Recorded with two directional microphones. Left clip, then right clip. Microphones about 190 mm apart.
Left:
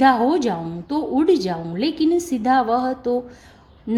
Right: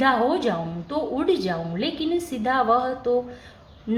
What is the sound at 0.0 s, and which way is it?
A woman's voice, 40° left (ahead or behind).